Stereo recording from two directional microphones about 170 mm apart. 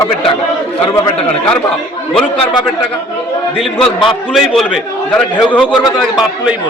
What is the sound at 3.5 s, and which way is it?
A man's voice, centre (ahead or behind).